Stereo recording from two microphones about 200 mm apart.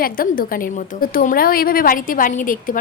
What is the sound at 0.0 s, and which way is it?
A woman's voice, 45° left (ahead or behind).